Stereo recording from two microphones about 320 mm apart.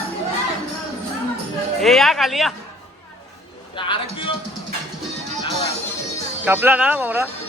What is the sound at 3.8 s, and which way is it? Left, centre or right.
Speech, centre.